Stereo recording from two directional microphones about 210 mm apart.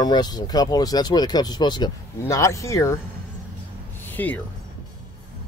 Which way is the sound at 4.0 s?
10° left (ahead or behind).